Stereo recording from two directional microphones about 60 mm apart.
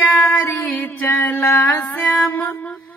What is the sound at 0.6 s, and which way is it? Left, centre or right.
Music, left.